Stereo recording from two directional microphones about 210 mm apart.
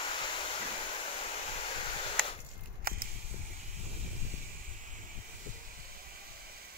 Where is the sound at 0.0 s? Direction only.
25° left (ahead or behind).